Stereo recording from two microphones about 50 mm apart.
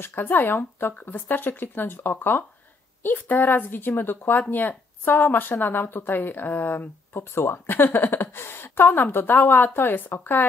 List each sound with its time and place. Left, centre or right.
0.0 s speech: left